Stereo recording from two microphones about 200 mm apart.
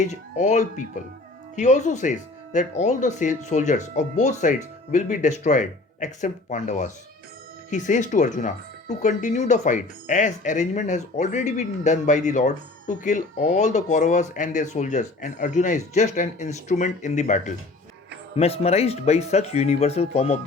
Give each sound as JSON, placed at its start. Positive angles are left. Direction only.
{"t": 0.0, "sound": "speech", "side_deg": 35}